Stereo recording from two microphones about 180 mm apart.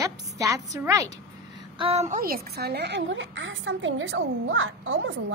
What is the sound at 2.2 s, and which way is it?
A woman's voice, 55° right (ahead or behind).